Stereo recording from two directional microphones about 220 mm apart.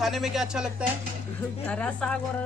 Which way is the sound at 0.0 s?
Centre (ahead or behind).